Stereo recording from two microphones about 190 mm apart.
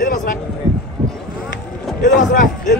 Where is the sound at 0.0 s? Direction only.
45° left (ahead or behind).